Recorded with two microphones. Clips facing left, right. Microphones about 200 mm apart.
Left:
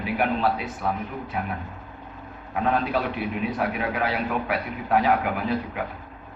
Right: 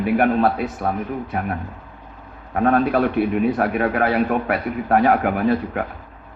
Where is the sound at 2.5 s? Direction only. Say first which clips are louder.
Right 7 dB; 50° right (ahead or behind).